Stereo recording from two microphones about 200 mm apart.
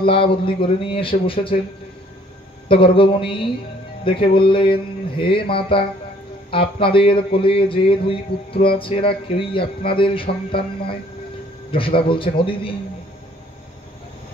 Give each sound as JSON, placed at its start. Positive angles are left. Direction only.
{"t": 0.0, "sound": "speech", "side_deg": 25}
{"t": 2.7, "sound": "speech", "side_deg": 25}